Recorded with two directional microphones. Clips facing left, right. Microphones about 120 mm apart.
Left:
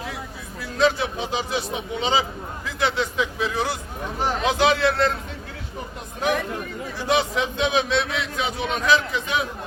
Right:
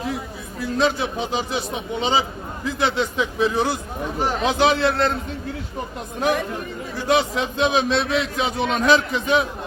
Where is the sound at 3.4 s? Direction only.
25° right (ahead or behind).